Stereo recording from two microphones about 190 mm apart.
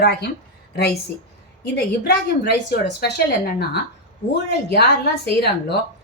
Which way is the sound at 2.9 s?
60° left (ahead or behind).